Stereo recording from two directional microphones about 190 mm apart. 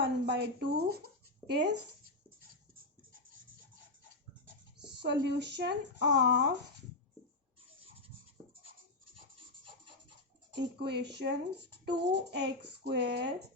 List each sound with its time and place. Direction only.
0.0 s speech: 60° right (ahead or behind)
4.9 s speech: 65° right (ahead or behind)
9.1 s a sound: 30° right (ahead or behind)
10.5 s speech: 60° right (ahead or behind)